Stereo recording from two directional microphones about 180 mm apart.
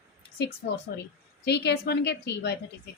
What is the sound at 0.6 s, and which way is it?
A woman's voice, 55° left (ahead or behind).